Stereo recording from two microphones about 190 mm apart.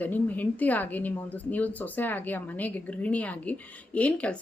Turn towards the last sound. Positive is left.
turn(degrees=5)  # may be behind; listen again after turning